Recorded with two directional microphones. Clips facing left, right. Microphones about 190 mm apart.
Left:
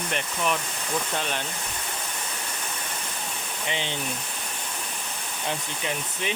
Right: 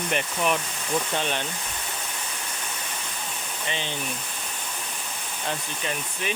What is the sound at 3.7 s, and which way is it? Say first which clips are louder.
Speech: left 1 dB; 15° left (ahead or behind).